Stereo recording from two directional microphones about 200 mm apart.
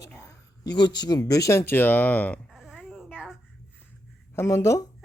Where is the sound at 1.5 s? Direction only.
10° left (ahead or behind).